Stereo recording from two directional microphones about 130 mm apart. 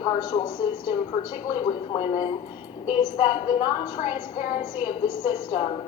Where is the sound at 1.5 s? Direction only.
35° left (ahead or behind).